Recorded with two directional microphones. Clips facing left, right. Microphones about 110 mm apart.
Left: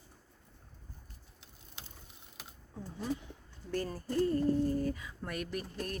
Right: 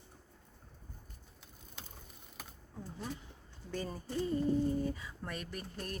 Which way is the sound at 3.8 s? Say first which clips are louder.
Left 5 dB; 5° right (ahead or behind).